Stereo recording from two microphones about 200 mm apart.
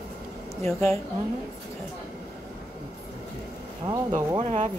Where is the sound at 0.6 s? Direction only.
15° left (ahead or behind).